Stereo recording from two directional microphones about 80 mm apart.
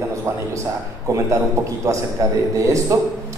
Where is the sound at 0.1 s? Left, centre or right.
Right.